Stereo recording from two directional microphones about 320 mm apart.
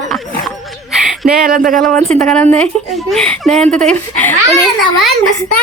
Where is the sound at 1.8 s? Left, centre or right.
Centre.